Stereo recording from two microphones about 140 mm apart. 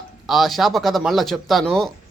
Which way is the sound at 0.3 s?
Centre (ahead or behind).